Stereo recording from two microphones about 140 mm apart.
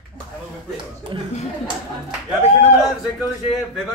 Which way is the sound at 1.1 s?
35° right (ahead or behind).